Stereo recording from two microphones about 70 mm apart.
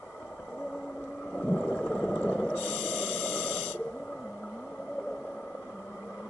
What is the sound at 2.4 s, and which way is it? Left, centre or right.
Snort, centre.